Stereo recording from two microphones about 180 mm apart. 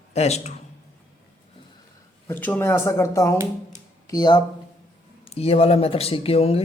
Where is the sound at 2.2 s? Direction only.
10° left (ahead or behind).